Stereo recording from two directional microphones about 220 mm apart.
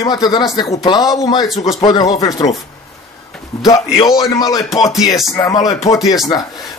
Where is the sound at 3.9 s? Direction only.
15° left (ahead or behind).